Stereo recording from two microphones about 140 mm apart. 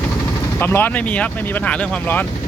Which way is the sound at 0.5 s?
15° left (ahead or behind).